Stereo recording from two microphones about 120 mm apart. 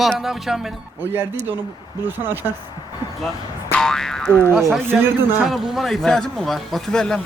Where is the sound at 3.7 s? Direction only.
5° left (ahead or behind).